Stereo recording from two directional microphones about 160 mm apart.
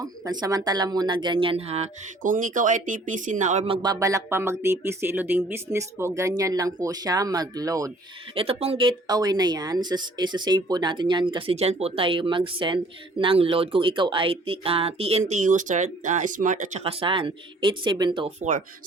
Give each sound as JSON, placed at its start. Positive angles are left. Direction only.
{"t": 0.0, "sound": "speech", "side_deg": -25}
{"t": 3.7, "sound": "speech", "side_deg": -25}
{"t": 8.4, "sound": "speech", "side_deg": -40}
{"t": 16.8, "sound": "speech", "side_deg": -35}
{"t": 18.3, "sound": "speech", "side_deg": -50}